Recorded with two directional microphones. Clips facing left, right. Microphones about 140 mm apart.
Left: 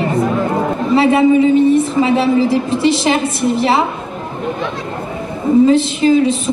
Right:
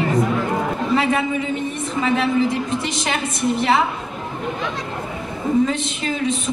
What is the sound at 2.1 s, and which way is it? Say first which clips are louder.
A woman's voice: left 4 dB; 30° left (ahead or behind).